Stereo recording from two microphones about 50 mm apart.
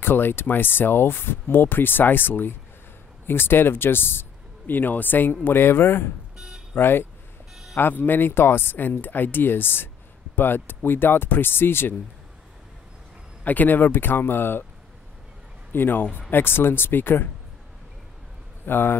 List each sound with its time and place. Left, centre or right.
0.0 s speech: left
6.3 s a sound: centre
6.7 s speech: left
13.4 s speech: left
15.7 s speech: left
18.7 s speech: left